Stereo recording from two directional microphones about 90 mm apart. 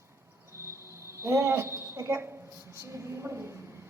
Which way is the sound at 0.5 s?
30° right (ahead or behind).